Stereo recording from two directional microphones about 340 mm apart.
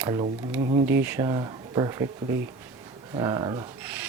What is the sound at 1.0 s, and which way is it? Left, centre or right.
Speech, centre.